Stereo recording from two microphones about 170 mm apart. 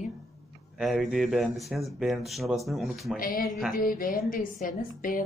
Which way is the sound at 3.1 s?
55° left (ahead or behind).